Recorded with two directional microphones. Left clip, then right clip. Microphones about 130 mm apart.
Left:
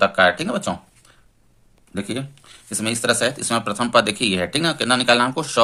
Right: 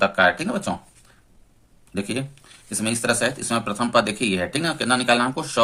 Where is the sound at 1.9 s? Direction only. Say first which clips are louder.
Even; 25° left (ahead or behind).